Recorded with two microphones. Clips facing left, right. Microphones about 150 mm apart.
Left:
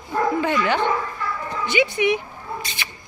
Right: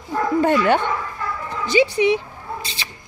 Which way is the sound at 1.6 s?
35° right (ahead or behind).